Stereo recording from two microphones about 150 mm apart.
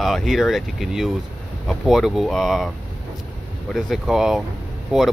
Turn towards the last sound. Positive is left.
turn(degrees=-5)  # may be behind; listen again after turning